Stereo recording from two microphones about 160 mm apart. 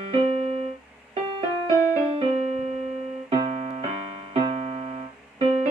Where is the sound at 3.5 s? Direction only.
45° right (ahead or behind).